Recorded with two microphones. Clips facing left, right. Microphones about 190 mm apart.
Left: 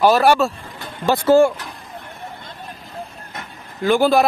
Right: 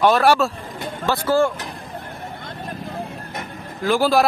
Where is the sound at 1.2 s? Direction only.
20° left (ahead or behind).